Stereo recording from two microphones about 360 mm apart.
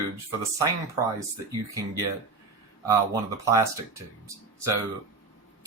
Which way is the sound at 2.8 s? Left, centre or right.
Centre.